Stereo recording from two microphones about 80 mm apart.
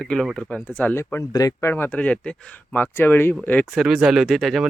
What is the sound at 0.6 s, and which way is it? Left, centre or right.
Speech, left.